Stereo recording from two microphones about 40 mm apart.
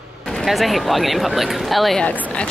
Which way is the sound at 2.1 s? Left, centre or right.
Left.